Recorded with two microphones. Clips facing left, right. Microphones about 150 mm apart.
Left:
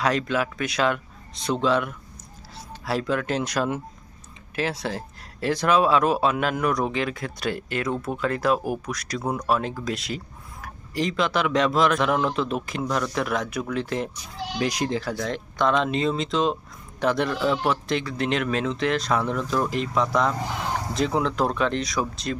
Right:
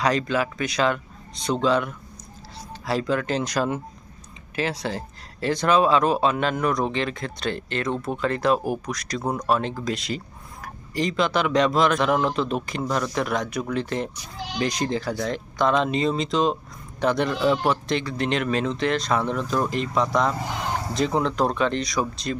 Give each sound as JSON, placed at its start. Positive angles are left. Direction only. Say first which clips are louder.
{"t": 0.0, "sound": "speech", "louder": "right 1 dB", "side_deg": 0}